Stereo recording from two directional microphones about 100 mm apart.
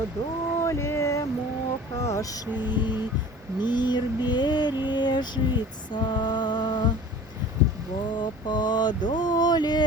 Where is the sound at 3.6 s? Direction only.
45° left (ahead or behind).